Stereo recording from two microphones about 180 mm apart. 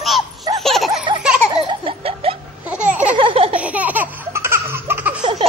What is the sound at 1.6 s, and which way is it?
Baby laughter, 30° right (ahead or behind).